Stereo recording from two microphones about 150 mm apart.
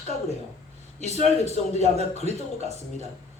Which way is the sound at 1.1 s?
45° right (ahead or behind).